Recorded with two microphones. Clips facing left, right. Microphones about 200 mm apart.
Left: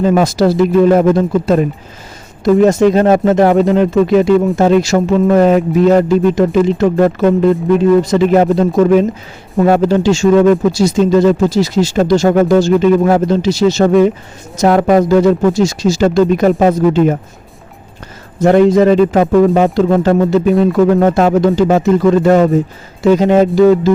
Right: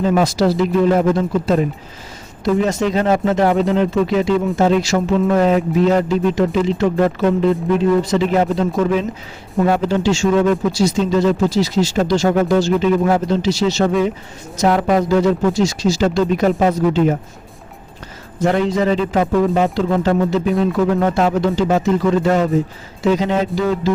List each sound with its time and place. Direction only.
0.0 s speech: 50° left (ahead or behind)
2.4 s speech: 50° left (ahead or behind)
18.4 s speech: 50° left (ahead or behind)